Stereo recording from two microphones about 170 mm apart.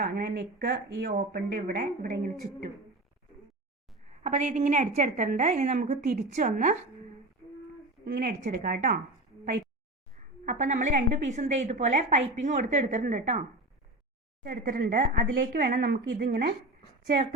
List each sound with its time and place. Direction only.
0.0 s speech: 60° right (ahead or behind)
4.2 s a woman's voice: 45° right (ahead or behind)
8.0 s speech: 60° right (ahead or behind)
10.4 s a woman's voice: 45° right (ahead or behind)
14.4 s speech: 55° right (ahead or behind)